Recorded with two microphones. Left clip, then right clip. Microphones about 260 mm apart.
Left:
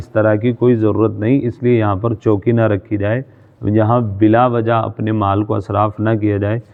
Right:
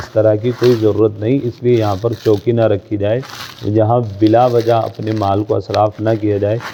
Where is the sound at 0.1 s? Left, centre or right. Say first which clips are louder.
Right 1 dB; left.